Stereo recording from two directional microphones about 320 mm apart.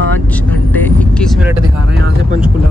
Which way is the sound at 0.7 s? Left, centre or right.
Centre.